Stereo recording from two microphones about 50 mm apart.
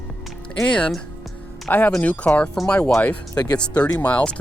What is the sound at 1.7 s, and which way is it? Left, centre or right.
Speech, left.